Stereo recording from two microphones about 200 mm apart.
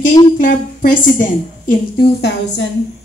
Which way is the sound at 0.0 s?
40° left (ahead or behind).